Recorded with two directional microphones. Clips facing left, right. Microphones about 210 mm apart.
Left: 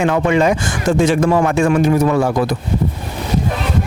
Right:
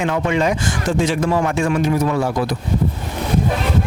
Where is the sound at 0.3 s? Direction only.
50° left (ahead or behind).